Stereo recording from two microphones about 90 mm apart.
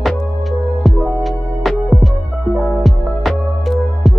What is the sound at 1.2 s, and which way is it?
Music, centre (ahead or behind).